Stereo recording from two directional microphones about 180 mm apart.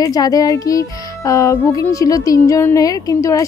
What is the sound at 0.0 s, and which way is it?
Speech, 20° left (ahead or behind).